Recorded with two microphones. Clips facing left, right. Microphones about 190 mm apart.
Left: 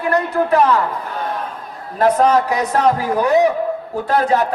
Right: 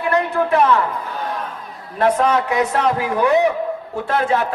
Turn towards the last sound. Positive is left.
turn(degrees=40)  # may be behind; listen again after turning